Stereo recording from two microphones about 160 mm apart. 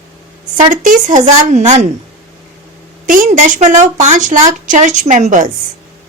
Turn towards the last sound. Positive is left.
turn(degrees=-50)  # may be behind; listen again after turning